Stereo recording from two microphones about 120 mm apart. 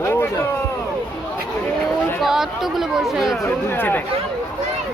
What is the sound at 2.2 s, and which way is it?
Speech, centre (ahead or behind).